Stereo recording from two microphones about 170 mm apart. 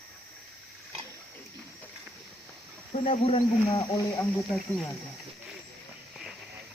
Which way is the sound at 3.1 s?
35° left (ahead or behind).